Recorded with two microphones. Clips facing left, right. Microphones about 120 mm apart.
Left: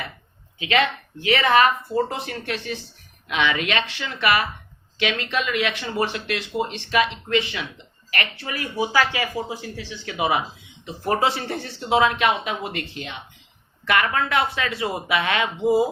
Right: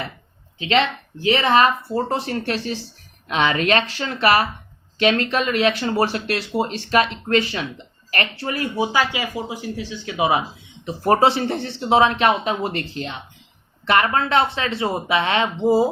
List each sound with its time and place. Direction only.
0.6 s speech: 30° right (ahead or behind)
10.8 s speech: 35° right (ahead or behind)